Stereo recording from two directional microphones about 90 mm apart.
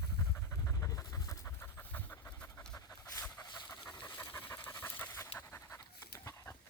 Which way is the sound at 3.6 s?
15° left (ahead or behind).